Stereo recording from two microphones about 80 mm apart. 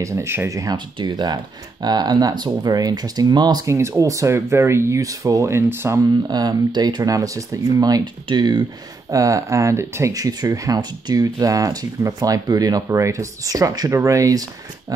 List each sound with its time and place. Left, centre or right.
0.0 s speech: right
0.5 s speech: right
0.7 s speech: right
3.6 s speech: right
6.2 s speech: right
8.0 s speech: right
9.1 s speech: right
10.1 s speech: right